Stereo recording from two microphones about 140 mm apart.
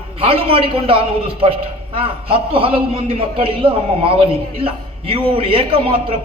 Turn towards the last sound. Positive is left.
turn(degrees=-40)  # may be behind; listen again after turning